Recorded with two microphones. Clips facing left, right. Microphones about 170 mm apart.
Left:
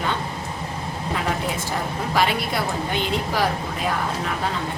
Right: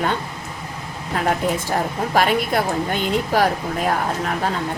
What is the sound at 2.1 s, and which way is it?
A woman's voice, 50° right (ahead or behind).